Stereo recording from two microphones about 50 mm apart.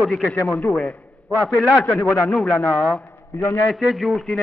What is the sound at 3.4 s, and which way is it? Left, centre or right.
Speech, left.